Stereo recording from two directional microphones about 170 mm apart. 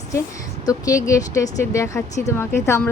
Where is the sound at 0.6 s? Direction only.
20° left (ahead or behind).